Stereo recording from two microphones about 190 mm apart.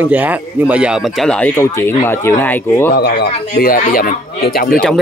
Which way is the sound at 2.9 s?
55° left (ahead or behind).